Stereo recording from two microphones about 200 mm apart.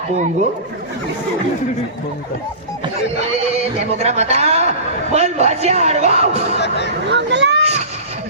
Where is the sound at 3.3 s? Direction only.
30° right (ahead or behind).